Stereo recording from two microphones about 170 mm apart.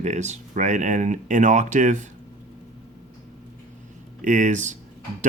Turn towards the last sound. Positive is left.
turn(degrees=-45)  # may be behind; listen again after turning